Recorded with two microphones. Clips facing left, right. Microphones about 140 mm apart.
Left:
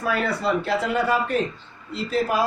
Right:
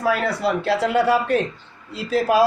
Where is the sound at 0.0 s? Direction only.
75° right (ahead or behind).